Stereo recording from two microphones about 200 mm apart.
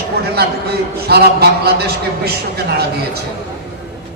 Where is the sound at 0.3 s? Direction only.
55° right (ahead or behind).